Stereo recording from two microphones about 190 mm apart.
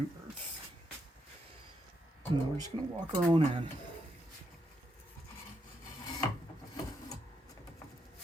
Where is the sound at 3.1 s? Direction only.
30° right (ahead or behind).